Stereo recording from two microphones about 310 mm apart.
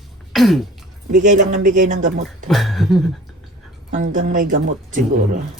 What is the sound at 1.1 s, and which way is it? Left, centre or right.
A woman's voice, right.